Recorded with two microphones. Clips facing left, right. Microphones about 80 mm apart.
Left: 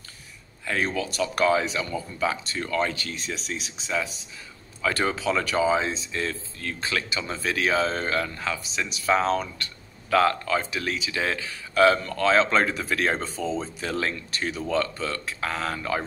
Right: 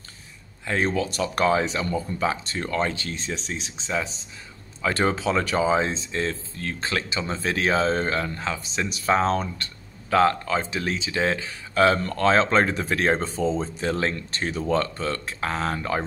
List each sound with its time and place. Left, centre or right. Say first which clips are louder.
0.7 s speech: right 3 dB; right
8.6 s speech: right 1 dB; right